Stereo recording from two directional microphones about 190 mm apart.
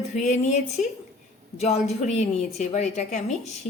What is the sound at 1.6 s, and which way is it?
A woman's voice, 35° left (ahead or behind).